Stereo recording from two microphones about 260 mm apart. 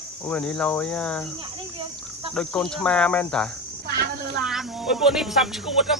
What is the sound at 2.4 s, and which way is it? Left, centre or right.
Speech, centre.